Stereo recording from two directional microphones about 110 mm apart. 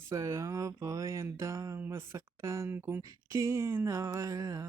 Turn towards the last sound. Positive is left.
turn(degrees=-30)  # may be behind; listen again after turning